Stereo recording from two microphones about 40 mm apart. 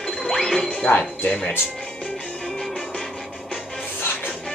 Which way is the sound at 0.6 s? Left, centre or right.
Left.